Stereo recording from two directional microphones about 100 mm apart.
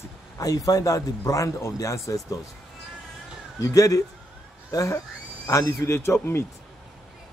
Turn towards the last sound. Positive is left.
turn(degrees=25)  # may be behind; listen again after turning